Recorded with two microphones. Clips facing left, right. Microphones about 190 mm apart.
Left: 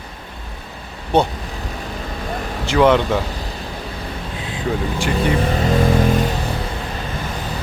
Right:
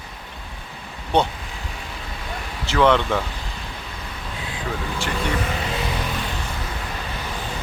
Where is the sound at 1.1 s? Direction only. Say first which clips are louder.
Left 3 dB; 5° left (ahead or behind).